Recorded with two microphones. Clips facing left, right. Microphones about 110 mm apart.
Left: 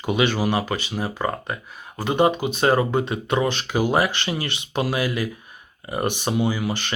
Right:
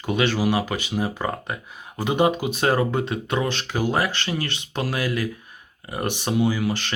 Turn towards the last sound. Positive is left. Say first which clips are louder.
# right 1 dB
turn(degrees=5)  # may be behind; listen again after turning